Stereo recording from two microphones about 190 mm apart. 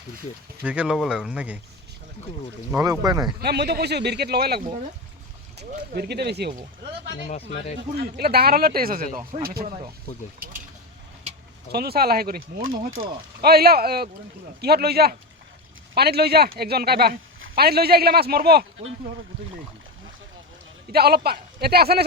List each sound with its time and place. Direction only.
0.6 s speech: 5° right (ahead or behind)
2.7 s speech: 20° right (ahead or behind)
3.4 s speech: 60° right (ahead or behind)
7.3 s speech: 35° left (ahead or behind)
7.8 s speech: 60° right (ahead or behind)
11.7 s speech: 55° right (ahead or behind)
20.9 s speech: 55° right (ahead or behind)